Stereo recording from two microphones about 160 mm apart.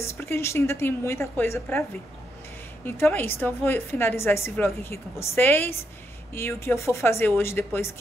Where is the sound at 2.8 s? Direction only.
15° left (ahead or behind).